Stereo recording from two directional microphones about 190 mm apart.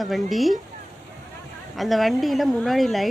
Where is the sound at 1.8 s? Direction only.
Centre (ahead or behind).